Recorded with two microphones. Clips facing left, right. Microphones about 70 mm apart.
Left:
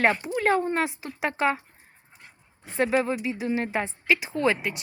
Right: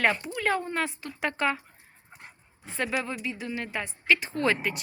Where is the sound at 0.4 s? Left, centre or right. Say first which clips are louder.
Left 4 dB; left.